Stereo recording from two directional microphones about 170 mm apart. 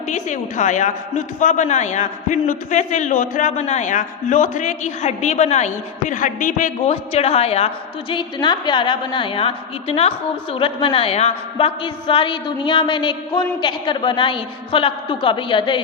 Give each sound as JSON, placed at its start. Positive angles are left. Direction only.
{"t": 0.1, "sound": "a man's voice", "side_deg": 45}
{"t": 6.9, "sound": "a woman's voice", "side_deg": 35}
{"t": 8.1, "sound": "a woman's voice", "side_deg": 25}